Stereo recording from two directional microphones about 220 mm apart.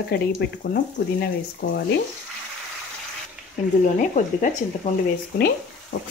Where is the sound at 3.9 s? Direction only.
35° left (ahead or behind).